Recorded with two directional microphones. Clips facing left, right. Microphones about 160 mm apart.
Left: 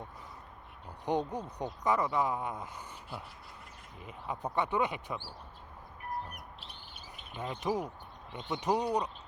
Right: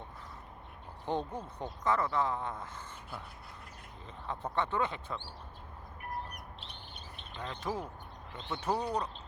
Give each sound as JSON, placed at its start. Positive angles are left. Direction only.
{"t": 1.0, "sound": "speech", "side_deg": 15}
{"t": 6.3, "sound": "bird", "side_deg": 5}
{"t": 7.3, "sound": "speech", "side_deg": 20}